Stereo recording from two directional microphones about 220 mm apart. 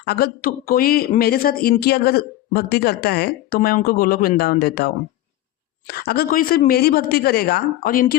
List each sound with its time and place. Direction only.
0.0 s speech: 45° left (ahead or behind)
5.9 s speech: 45° left (ahead or behind)